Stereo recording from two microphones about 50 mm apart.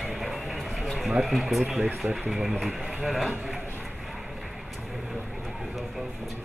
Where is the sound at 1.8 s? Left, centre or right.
Right.